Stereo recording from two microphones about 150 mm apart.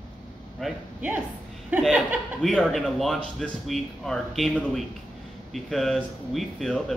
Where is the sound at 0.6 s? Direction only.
Centre (ahead or behind).